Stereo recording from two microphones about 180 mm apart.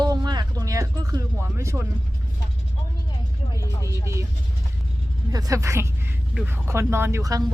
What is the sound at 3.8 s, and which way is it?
Speech, 15° right (ahead or behind).